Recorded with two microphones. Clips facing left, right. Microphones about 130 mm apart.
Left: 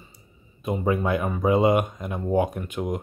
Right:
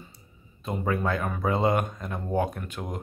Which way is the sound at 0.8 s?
15° left (ahead or behind).